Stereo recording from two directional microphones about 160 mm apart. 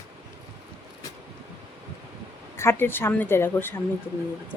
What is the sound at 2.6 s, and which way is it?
A woman's voice, 15° left (ahead or behind).